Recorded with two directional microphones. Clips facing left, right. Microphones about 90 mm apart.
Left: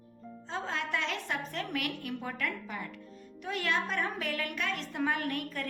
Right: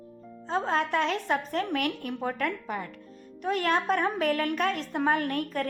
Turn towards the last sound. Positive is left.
turn(degrees=-45)  # may be behind; listen again after turning